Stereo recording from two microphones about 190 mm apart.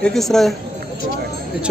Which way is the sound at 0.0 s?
Centre (ahead or behind).